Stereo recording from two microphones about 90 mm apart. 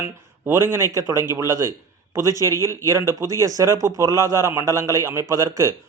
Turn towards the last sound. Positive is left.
turn(degrees=-35)  # may be behind; listen again after turning